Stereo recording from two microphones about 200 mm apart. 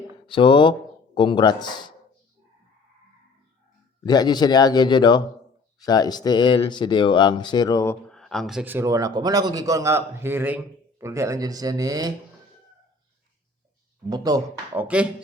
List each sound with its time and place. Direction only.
0.3 s speech: 25° left (ahead or behind)
4.0 s speech: 20° left (ahead or behind)
8.1 s a man's voice: centre (ahead or behind); by 12.1 s 20° right (ahead or behind)
14.1 s speech: 20° right (ahead or behind)
14.8 s a man's voice: 5° right (ahead or behind)